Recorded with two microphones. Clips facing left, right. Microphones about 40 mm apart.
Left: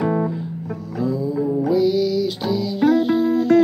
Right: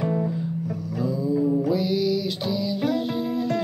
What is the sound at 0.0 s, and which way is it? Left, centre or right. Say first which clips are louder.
Music: left 5 dB; left.